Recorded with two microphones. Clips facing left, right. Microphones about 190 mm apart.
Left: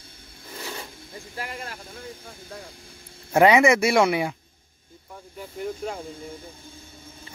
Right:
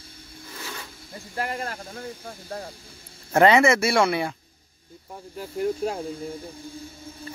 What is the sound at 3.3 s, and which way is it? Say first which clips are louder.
Speech: left 1 dB; 10° left (ahead or behind).